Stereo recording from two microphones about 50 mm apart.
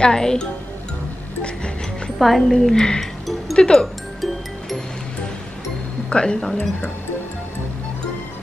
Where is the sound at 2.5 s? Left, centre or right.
Centre.